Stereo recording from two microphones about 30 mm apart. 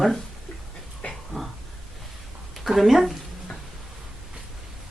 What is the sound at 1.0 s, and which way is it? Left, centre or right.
Dog, left.